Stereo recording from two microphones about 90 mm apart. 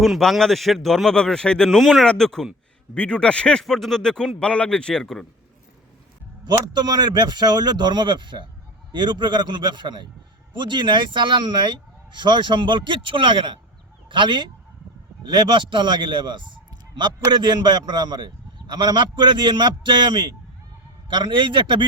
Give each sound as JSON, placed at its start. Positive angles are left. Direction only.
{"t": 0.0, "sound": "speech", "side_deg": 0}
{"t": 6.4, "sound": "a man's voice", "side_deg": -50}